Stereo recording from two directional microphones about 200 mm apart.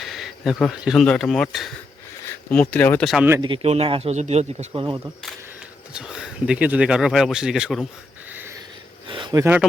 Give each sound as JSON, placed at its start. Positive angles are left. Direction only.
{"t": 0.0, "sound": "speech", "side_deg": 0}
{"t": 3.2, "sound": "speech", "side_deg": -20}
{"t": 4.7, "sound": "speech", "side_deg": -25}
{"t": 5.9, "sound": "speech", "side_deg": -5}
{"t": 8.3, "sound": "a sound", "side_deg": -10}
{"t": 9.0, "sound": "a sound", "side_deg": -25}